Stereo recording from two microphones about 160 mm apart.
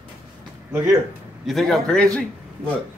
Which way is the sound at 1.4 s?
Centre (ahead or behind).